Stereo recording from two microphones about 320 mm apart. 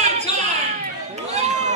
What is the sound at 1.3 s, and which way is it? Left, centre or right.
Run, right.